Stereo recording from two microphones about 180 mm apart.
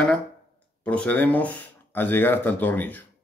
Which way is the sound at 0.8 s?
5° left (ahead or behind).